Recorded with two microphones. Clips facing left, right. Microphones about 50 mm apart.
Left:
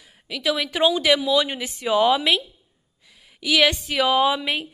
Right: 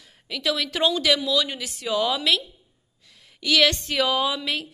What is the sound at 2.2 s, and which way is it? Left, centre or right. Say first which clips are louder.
Speech: left 2 dB; centre.